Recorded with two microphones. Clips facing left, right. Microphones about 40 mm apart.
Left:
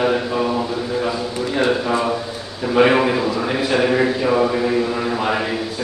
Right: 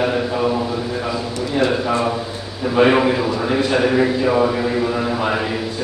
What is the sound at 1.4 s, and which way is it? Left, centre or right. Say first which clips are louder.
Speech: even; centre.